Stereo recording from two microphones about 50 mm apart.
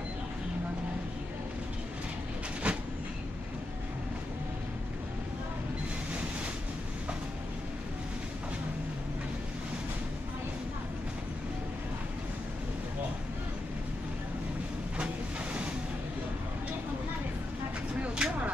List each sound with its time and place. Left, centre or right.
2.6 s train: right
18.0 s vehicle: centre